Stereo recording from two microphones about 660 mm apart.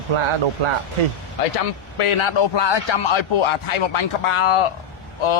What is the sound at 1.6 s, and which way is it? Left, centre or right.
A man's voice, left.